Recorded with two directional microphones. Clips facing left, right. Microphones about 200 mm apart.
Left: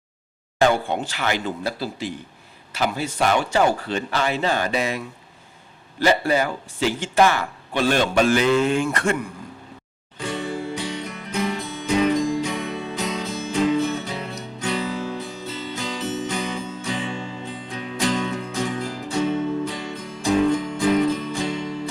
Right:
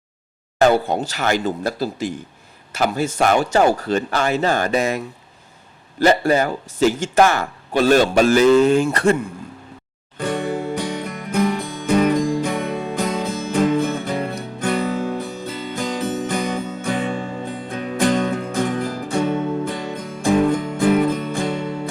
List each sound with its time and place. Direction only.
0.6 s speech: 40° right (ahead or behind)
10.2 s music: 55° right (ahead or behind)